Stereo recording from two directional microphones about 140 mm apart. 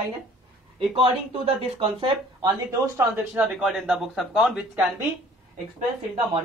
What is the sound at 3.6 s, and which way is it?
Speech, 5° right (ahead or behind).